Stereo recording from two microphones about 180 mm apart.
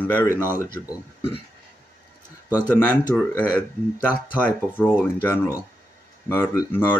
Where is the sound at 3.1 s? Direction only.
5° left (ahead or behind).